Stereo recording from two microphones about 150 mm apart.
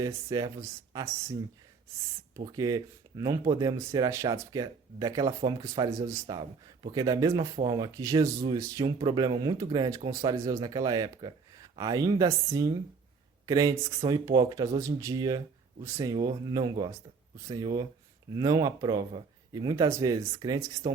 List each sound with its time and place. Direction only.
0.0 s speech: 25° right (ahead or behind)
2.5 s speech: 25° right (ahead or behind)